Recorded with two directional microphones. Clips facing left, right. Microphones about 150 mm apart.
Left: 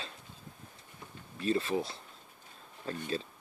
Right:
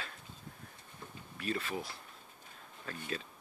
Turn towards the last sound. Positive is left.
turn(degrees=30)  # may be behind; listen again after turning